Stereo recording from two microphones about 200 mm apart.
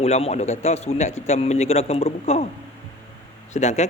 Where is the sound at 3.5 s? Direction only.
35° left (ahead or behind).